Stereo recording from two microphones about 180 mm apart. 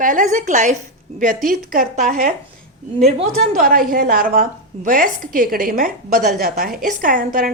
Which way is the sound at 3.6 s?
55° right (ahead or behind).